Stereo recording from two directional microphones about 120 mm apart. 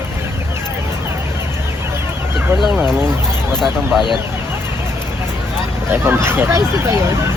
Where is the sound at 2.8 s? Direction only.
20° right (ahead or behind).